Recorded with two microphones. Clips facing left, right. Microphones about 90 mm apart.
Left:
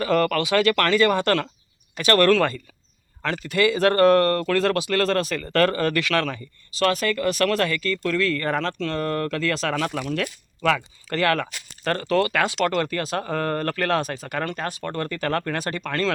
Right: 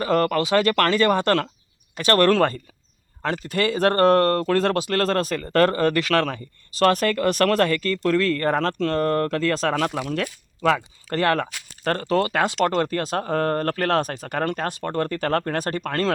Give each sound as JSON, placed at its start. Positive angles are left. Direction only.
{"t": 0.0, "sound": "speech", "side_deg": -35}
{"t": 2.3, "sound": "speech", "side_deg": -45}
{"t": 10.1, "sound": "speech", "side_deg": -30}